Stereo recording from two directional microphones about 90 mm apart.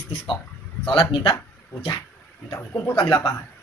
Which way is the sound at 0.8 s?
60° left (ahead or behind).